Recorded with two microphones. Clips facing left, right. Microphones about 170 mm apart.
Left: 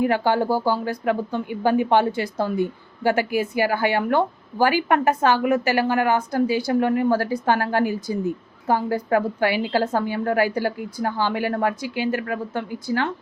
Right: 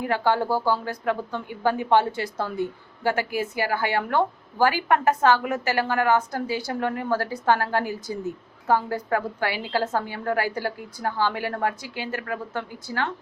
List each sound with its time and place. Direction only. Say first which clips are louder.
0.0 s speech: left 3 dB; 15° left (ahead or behind)